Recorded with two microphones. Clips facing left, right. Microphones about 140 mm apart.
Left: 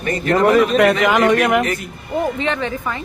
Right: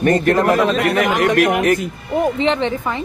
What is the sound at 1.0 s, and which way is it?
Speech, 90° left.